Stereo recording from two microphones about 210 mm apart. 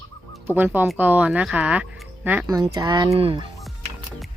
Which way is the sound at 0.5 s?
10° right (ahead or behind).